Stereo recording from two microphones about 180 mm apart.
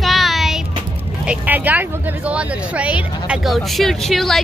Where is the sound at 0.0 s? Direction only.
Centre (ahead or behind).